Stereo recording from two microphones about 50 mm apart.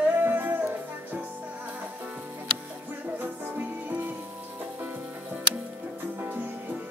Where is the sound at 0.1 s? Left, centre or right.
Right.